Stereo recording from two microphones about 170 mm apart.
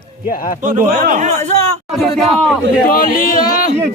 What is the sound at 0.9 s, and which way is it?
Speech, 70° right (ahead or behind).